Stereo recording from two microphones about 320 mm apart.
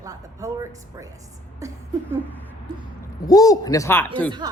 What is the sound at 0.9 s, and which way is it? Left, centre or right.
Speech, centre.